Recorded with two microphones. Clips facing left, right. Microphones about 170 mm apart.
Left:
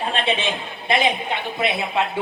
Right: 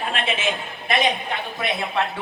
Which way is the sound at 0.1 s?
35° left (ahead or behind).